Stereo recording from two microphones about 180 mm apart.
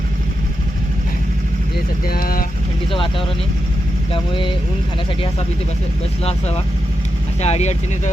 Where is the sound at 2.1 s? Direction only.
55° left (ahead or behind).